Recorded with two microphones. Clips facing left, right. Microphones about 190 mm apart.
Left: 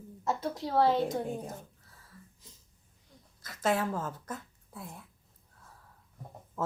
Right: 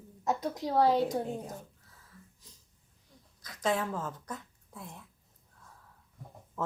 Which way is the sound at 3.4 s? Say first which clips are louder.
Left 1 dB; 5° left (ahead or behind).